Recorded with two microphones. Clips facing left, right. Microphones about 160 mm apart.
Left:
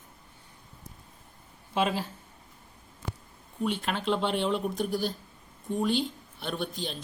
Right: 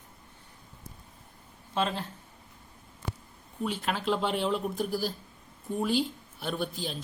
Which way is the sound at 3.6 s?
Centre (ahead or behind).